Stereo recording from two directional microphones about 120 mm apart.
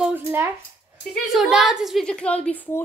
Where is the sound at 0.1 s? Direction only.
20° right (ahead or behind).